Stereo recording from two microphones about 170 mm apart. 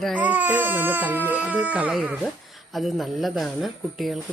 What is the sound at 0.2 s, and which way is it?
Speech, 10° right (ahead or behind).